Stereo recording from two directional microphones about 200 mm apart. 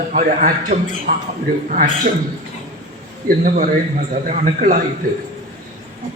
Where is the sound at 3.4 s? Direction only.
40° right (ahead or behind).